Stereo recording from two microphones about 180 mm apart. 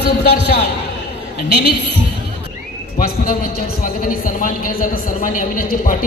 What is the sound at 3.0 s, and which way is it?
A man's voice, 55° left (ahead or behind).